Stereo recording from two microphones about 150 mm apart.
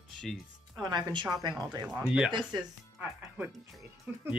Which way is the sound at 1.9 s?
10° right (ahead or behind).